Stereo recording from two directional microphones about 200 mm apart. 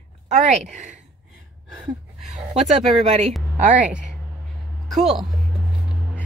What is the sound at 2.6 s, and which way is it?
A woman's voice, 35° right (ahead or behind).